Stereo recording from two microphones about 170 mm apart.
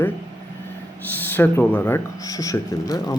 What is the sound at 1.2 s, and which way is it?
Speech, 10° left (ahead or behind).